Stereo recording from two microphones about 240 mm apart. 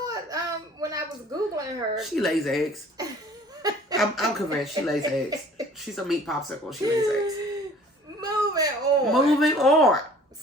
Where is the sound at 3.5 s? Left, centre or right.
Centre.